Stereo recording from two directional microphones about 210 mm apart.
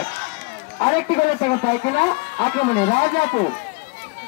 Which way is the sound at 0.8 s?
30° left (ahead or behind).